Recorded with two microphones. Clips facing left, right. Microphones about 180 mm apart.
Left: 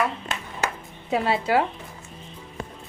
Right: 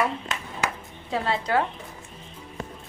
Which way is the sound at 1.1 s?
15° left (ahead or behind).